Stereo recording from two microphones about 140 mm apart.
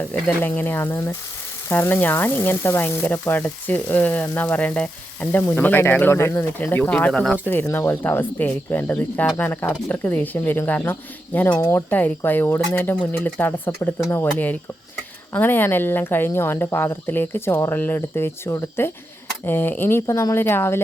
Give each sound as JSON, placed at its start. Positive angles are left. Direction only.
{"t": 0.1, "sound": "frying", "side_deg": 10}